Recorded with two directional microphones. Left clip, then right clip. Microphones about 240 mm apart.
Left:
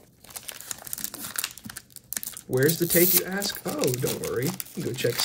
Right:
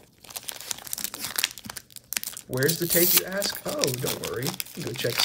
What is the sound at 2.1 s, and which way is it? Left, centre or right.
Speech, centre.